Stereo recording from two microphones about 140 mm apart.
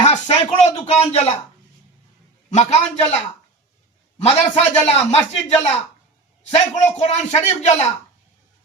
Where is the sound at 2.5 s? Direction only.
55° left (ahead or behind).